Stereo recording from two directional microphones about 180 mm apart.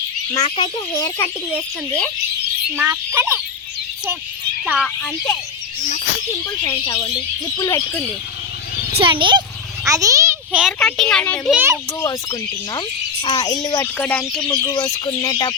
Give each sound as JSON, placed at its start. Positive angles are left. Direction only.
{"t": 0.4, "sound": "speech", "side_deg": 30}
{"t": 0.9, "sound": "speech", "side_deg": 20}
{"t": 2.7, "sound": "speech", "side_deg": -10}
{"t": 4.6, "sound": "speech", "side_deg": -5}
{"t": 5.0, "sound": "speech", "side_deg": 15}
{"t": 6.7, "sound": "speech", "side_deg": 20}
{"t": 9.0, "sound": "a child's voice", "side_deg": -30}
{"t": 9.8, "sound": "a sound", "side_deg": -20}
{"t": 10.6, "sound": "speech", "side_deg": 0}
{"t": 11.5, "sound": "speech", "side_deg": -15}
{"t": 11.9, "sound": "speech", "side_deg": 20}
{"t": 13.8, "sound": "speech", "side_deg": 10}